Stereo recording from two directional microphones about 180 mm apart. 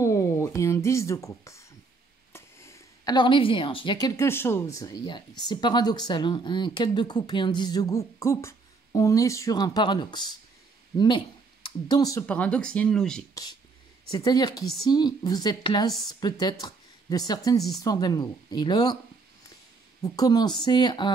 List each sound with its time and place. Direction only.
0.0 s a sound: 15° left (ahead or behind)
2.3 s a woman's voice: 15° left (ahead or behind)
12.3 s speech: 5° left (ahead or behind)
13.3 s a woman's voice: 20° left (ahead or behind)
16.6 s a sound: 20° left (ahead or behind)
17.7 s a woman's voice: 20° left (ahead or behind)
20.0 s a woman's voice: 20° left (ahead or behind)